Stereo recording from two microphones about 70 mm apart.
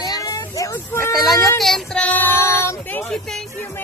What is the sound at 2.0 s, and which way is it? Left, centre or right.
Child singing, left.